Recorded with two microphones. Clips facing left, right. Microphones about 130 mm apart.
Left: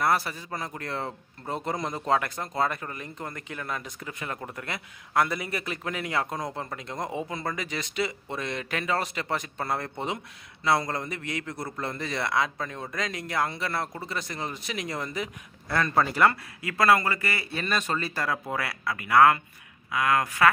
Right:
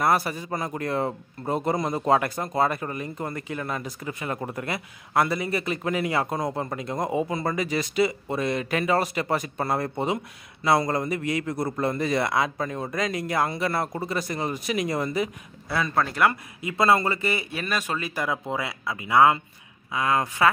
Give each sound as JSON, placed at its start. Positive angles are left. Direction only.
{"t": 0.0, "sound": "a man's voice", "side_deg": -15}
{"t": 16.3, "sound": "speech", "side_deg": -20}
{"t": 17.6, "sound": "a man's voice", "side_deg": -10}